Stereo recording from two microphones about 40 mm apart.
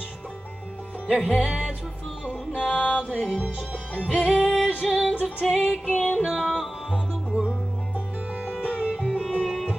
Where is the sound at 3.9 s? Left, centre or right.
Left.